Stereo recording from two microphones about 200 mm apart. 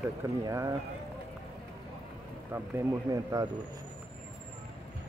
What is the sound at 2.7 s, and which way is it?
Speech, 20° right (ahead or behind).